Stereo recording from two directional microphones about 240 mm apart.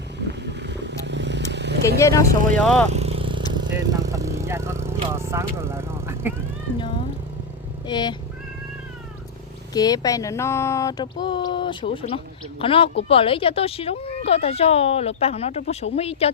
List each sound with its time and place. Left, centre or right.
0.3 s vehicle: right
2.0 s speech: centre
2.9 s vehicle: right
3.5 s speech: centre
7.9 s speech: centre
9.7 s speech: centre